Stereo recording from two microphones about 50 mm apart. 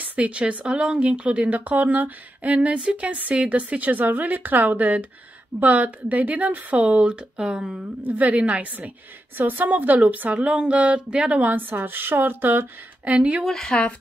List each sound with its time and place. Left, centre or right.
0.0 s a woman's voice: right
8.0 s a woman's voice: right
11.7 s speech: right
13.1 s a woman's voice: right
13.5 s speech: centre